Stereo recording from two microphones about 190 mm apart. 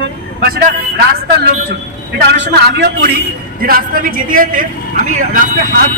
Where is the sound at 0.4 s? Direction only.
55° right (ahead or behind).